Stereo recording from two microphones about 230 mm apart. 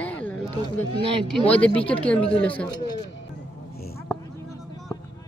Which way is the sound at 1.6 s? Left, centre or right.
Centre.